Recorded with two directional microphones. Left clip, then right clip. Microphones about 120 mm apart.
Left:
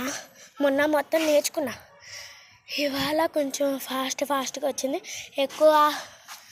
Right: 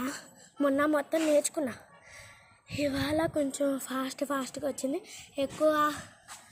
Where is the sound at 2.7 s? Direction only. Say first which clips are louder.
Left 5 dB; 75° left (ahead or behind).